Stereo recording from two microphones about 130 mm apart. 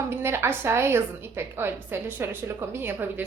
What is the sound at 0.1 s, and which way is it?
A woman's voice, 20° right (ahead or behind).